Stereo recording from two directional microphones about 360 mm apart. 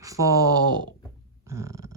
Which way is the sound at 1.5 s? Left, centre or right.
Centre.